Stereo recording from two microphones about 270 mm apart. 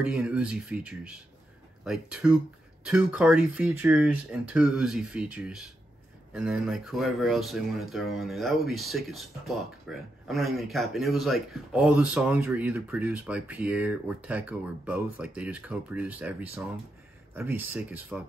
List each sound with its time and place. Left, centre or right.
0.0 s speech: centre